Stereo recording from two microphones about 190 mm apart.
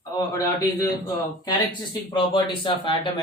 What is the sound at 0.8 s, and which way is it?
Speech, 20° left (ahead or behind).